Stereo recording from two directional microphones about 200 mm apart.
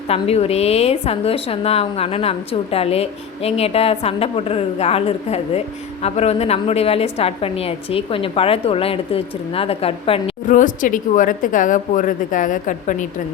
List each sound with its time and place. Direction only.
0.1 s a woman's voice: 30° left (ahead or behind)
10.5 s a woman's voice: 40° left (ahead or behind)